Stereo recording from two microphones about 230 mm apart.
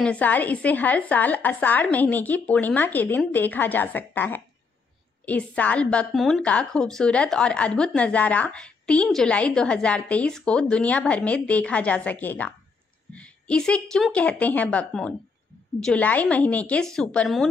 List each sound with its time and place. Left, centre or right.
0.0 s a woman's voice: centre